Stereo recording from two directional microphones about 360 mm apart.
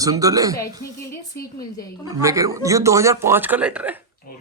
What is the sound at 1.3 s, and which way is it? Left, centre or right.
Speech, left.